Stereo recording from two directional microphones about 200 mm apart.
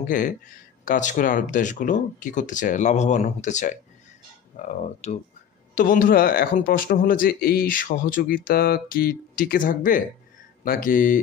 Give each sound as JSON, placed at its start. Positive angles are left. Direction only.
{"t": 0.0, "sound": "speech", "side_deg": 40}